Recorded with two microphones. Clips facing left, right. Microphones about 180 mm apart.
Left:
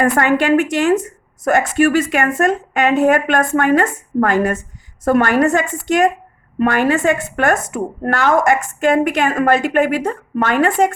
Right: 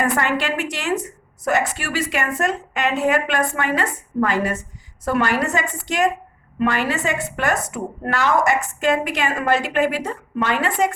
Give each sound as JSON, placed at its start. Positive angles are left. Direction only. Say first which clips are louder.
{"t": 0.0, "sound": "a woman's voice", "louder": "left 6 dB", "side_deg": 50}